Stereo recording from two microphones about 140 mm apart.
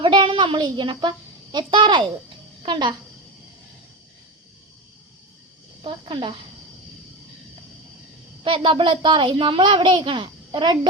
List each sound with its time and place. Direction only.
0.0 s a woman's voice: 35° right (ahead or behind)
5.8 s a child's voice: 40° right (ahead or behind)
8.4 s a child's voice: 35° right (ahead or behind)